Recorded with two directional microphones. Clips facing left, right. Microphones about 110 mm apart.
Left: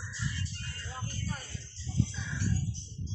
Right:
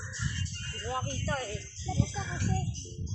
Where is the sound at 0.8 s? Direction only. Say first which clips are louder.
Right 8 dB; 85° right.